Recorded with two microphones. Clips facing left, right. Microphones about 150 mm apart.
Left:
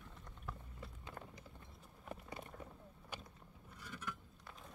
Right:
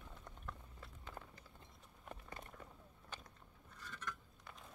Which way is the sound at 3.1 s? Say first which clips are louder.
Left 3 dB; 10° left (ahead or behind).